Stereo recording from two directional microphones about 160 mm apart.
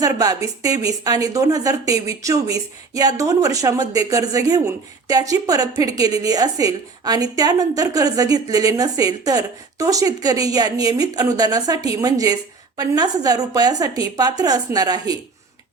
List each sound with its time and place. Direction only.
0.0 s speech: 20° right (ahead or behind)